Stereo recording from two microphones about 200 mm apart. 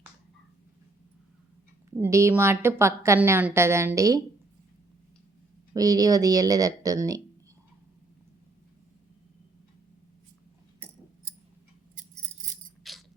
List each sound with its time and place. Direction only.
2.0 s a woman's voice: 15° right (ahead or behind)
5.7 s speech: 20° right (ahead or behind)
12.8 s a sound: centre (ahead or behind)